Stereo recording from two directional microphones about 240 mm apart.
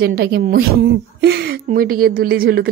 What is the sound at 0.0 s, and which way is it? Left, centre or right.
Speech, right.